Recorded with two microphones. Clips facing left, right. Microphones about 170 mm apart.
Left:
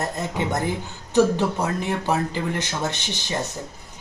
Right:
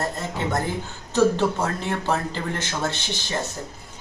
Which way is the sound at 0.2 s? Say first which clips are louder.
Left 1 dB; 15° left (ahead or behind).